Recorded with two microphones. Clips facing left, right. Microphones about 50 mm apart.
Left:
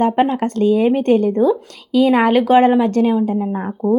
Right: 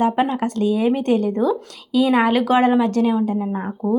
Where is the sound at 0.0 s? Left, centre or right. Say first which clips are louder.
Left 3 dB; left.